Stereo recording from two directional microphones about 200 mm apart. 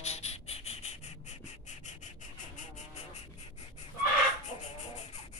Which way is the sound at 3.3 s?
35° left (ahead or behind).